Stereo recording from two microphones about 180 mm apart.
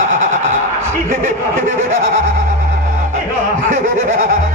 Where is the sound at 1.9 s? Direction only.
50° right (ahead or behind).